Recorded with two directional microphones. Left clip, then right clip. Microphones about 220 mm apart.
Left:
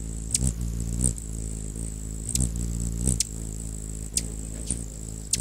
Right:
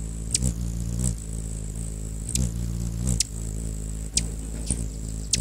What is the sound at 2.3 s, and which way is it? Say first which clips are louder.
Vehicle: even; centre (ahead or behind).